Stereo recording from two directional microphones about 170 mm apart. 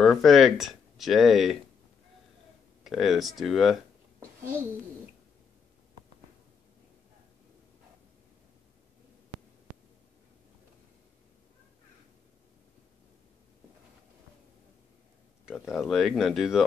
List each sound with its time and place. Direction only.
0.0 s speech: centre (ahead or behind)
2.8 s speech: centre (ahead or behind)
15.4 s speech: centre (ahead or behind)